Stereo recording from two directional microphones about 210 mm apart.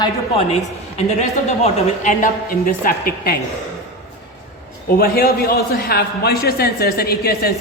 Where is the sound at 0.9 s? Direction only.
30° left (ahead or behind).